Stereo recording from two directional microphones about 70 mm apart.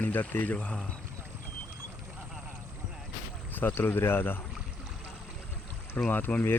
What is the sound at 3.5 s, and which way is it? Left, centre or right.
Speech, left.